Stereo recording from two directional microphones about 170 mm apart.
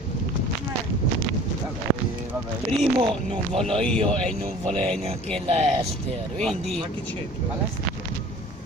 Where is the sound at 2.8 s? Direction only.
30° right (ahead or behind).